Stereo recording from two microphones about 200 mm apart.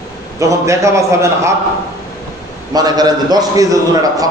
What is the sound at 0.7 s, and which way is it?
Speech, 15° right (ahead or behind).